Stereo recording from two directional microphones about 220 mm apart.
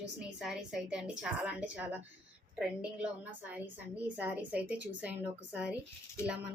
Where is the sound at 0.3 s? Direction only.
5° right (ahead or behind).